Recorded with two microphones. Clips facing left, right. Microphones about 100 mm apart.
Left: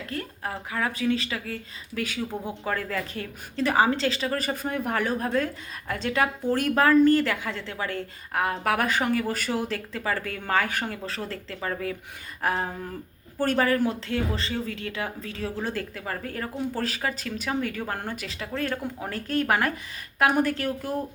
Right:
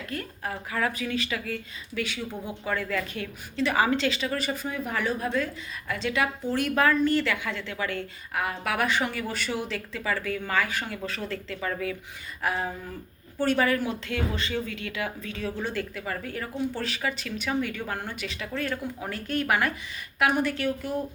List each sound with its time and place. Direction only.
0.1 s speech: 25° left (ahead or behind)
2.6 s a woman's voice: 35° left (ahead or behind)
3.8 s a woman's voice: 30° left (ahead or behind); by 10.8 s 50° left (ahead or behind)
11.0 s a woman's voice: 35° left (ahead or behind)
12.4 s a sound: 40° left (ahead or behind)
13.4 s a woman's voice: 40° left (ahead or behind)